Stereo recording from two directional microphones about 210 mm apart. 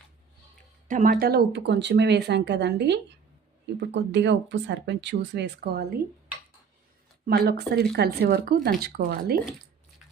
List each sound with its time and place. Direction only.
0.9 s speech: 40° right (ahead or behind)
7.3 s speech: 50° right (ahead or behind)